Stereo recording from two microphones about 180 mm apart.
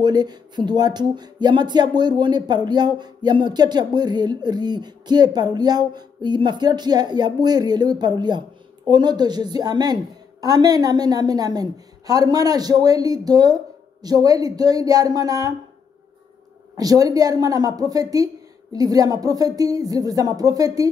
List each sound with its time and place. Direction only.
0.0 s speech: 25° right (ahead or behind)
16.7 s speech: 20° right (ahead or behind)